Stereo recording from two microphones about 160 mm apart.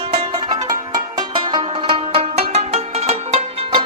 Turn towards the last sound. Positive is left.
turn(degrees=-40)  # may be behind; listen again after turning